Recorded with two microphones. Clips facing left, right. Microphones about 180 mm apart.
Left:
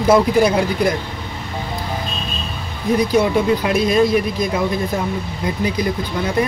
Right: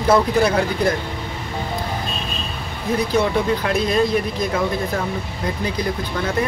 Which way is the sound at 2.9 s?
15° left (ahead or behind).